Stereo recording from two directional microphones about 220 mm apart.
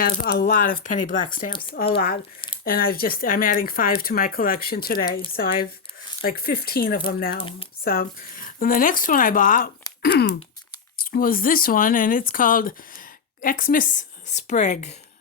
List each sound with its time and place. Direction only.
0.0 s speech: 45° left (ahead or behind)
6.2 s speech: 45° left (ahead or behind)
7.3 s speech: 25° left (ahead or behind)
7.9 s speech: 40° left (ahead or behind)
10.0 s a sound: 45° left (ahead or behind)
10.9 s speech: 40° left (ahead or behind)